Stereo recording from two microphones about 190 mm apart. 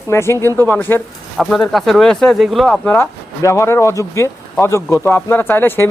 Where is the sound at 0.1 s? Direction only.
15° left (ahead or behind).